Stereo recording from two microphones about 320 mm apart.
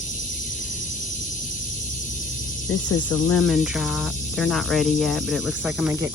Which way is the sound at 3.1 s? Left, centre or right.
Centre.